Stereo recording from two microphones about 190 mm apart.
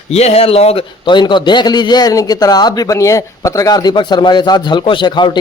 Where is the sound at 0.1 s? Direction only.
35° left (ahead or behind).